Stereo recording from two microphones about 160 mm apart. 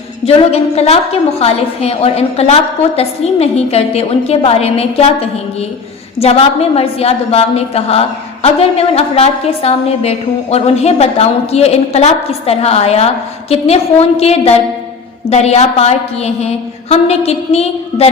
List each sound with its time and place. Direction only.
0.3 s a woman's voice: 40° left (ahead or behind)